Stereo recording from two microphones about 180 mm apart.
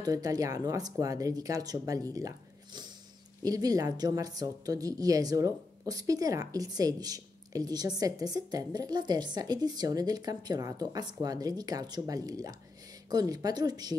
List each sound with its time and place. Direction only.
0.0 s a woman's voice: 20° right (ahead or behind)